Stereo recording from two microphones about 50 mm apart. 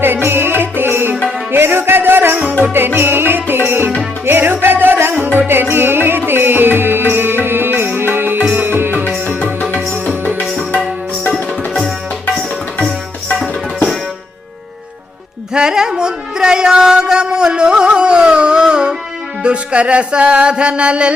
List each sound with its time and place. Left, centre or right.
0.3 s music: right
15.5 s music: centre